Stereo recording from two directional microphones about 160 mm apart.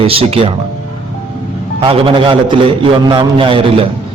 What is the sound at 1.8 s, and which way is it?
A man's voice, 30° right (ahead or behind).